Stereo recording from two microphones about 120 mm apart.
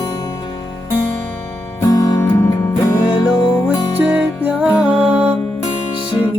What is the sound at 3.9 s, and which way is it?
Music, 15° right (ahead or behind).